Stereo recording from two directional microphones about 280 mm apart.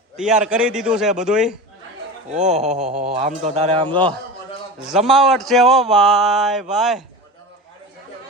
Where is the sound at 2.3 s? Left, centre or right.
Right.